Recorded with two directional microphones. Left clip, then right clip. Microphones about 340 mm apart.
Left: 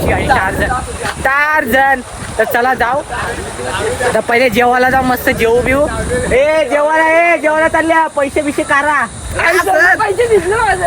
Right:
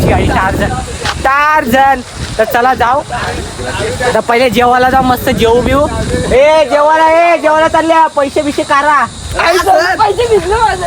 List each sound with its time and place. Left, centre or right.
0.1 s speech: centre
4.3 s speech: centre